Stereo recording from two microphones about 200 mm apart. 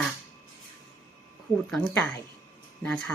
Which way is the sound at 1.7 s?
Centre (ahead or behind).